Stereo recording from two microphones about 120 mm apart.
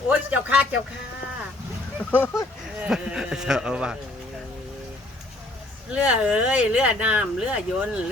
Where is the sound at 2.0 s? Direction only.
15° left (ahead or behind).